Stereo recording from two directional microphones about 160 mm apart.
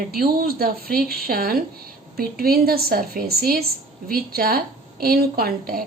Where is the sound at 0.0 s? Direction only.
70° right (ahead or behind).